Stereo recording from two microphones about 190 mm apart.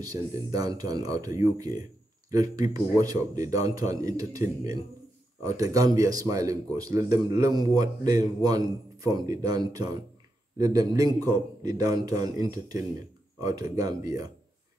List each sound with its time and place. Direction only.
0.0 s speech: 20° right (ahead or behind)